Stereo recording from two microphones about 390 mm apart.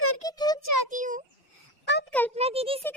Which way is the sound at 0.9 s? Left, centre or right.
Centre.